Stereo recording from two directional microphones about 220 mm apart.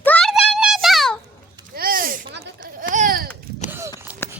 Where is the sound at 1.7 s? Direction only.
40° right (ahead or behind).